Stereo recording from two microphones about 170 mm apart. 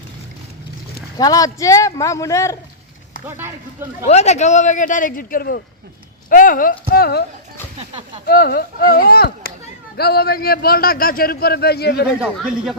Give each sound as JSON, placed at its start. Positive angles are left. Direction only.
{"t": 1.2, "sound": "speech", "side_deg": 20}
{"t": 3.2, "sound": "speech", "side_deg": -15}
{"t": 4.1, "sound": "a man's voice", "side_deg": 40}
{"t": 6.9, "sound": "speech", "side_deg": 65}
{"t": 7.8, "sound": "speech", "side_deg": -35}
{"t": 8.3, "sound": "a man's voice", "side_deg": 65}
{"t": 12.2, "sound": "speech", "side_deg": -5}